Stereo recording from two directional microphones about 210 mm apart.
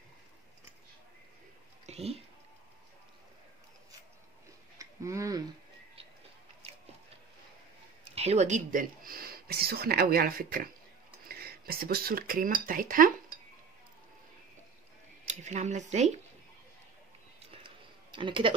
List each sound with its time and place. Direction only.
1.9 s speech: 30° right (ahead or behind)
4.7 s speech: 15° right (ahead or behind)
8.1 s speech: 30° right (ahead or behind)
15.2 s speech: 35° right (ahead or behind)
17.6 s a sound: 25° right (ahead or behind)